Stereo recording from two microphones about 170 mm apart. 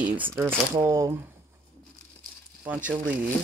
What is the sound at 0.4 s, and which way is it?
Speech, 15° right (ahead or behind).